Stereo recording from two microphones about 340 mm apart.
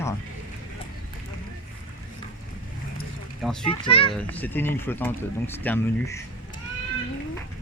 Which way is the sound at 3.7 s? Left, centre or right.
Centre.